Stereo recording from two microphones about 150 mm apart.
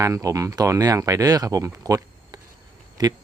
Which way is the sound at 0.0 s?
20° right (ahead or behind).